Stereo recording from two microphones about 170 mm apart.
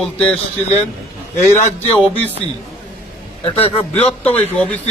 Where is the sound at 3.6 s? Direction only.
35° left (ahead or behind).